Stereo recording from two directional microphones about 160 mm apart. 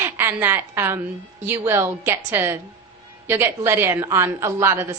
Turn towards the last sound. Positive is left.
turn(degrees=-15)  # may be behind; listen again after turning